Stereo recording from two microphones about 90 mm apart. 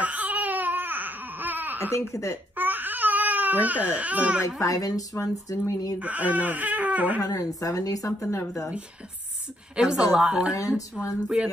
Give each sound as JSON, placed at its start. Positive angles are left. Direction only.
{"t": 0.0, "sound": "baby cry", "side_deg": -15}
{"t": 1.9, "sound": "a woman's voice", "side_deg": 30}
{"t": 2.5, "sound": "baby cry", "side_deg": -20}
{"t": 4.6, "sound": "a woman's voice", "side_deg": 40}
{"t": 5.9, "sound": "speech", "side_deg": -15}
{"t": 7.2, "sound": "a woman's voice", "side_deg": 40}
{"t": 9.8, "sound": "speech", "side_deg": -10}